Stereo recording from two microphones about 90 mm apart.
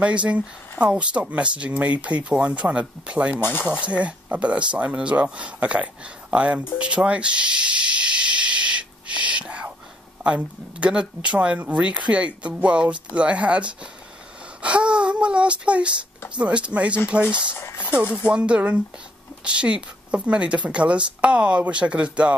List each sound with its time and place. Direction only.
0.0 s speech: 15° right (ahead or behind)
3.3 s speech: 25° left (ahead or behind)
3.8 s speech: 15° right (ahead or behind)
6.8 s hiss: 10° right (ahead or behind)
10.2 s speech: 10° right (ahead or behind)
14.6 s a sound: 10° right (ahead or behind)
16.3 s speech: 10° right (ahead or behind)
17.6 s a sound: 25° left (ahead or behind)
18.1 s speech: 10° right (ahead or behind)